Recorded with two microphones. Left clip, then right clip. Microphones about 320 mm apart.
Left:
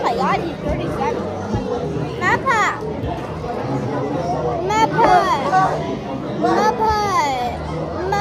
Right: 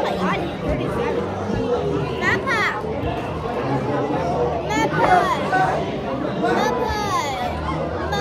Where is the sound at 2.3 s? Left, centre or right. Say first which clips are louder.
Left 4 dB; centre.